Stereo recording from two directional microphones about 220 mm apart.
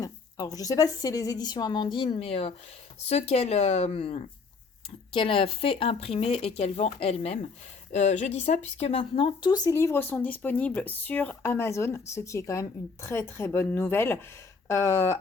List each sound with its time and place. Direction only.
0.0 s a woman's voice: 15° left (ahead or behind)